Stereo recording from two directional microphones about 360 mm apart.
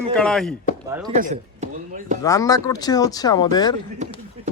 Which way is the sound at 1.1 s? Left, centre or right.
Centre.